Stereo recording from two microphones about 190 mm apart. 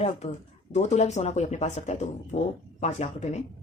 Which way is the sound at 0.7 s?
35° left (ahead or behind).